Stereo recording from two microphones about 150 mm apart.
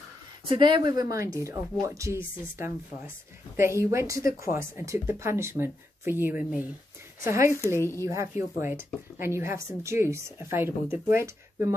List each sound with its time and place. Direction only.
0.5 s speech: 30° right (ahead or behind)
3.5 s a woman's voice: 20° right (ahead or behind)